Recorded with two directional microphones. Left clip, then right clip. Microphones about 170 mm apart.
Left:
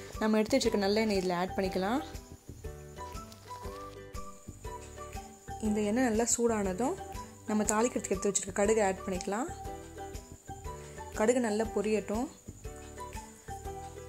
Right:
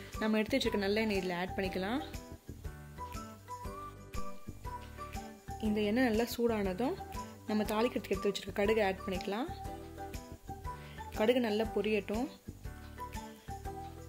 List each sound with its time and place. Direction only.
0.2 s a woman's voice: 15° left (ahead or behind)
5.1 s a woman's voice: centre (ahead or behind)
9.1 s music: centre (ahead or behind)
11.1 s speech: centre (ahead or behind)